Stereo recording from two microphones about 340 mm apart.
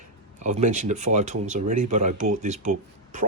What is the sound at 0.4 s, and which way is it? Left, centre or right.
Speech, right.